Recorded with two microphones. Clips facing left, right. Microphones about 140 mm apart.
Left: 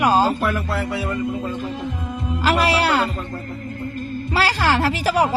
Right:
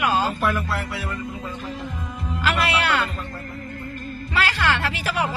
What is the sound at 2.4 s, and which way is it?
Music, 35° left (ahead or behind).